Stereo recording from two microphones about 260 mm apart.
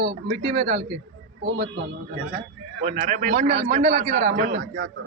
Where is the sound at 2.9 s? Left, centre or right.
Right.